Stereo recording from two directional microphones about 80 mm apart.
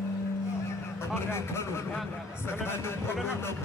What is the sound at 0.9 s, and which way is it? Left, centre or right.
A man's voice, left.